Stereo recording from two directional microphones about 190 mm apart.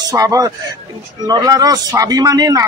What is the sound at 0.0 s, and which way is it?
A man's voice, 20° right (ahead or behind).